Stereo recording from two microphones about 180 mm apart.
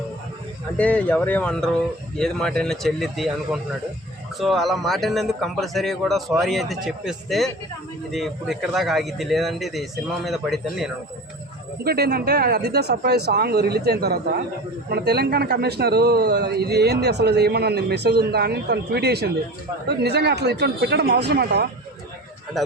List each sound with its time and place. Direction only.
0.8 s speech: 10° left (ahead or behind)
11.8 s speech: 60° right (ahead or behind)
22.5 s speech: centre (ahead or behind)